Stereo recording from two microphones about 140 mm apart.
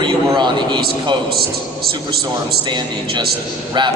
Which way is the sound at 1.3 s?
90° right.